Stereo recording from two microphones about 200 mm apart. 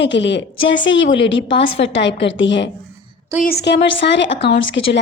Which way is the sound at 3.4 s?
55° left (ahead or behind).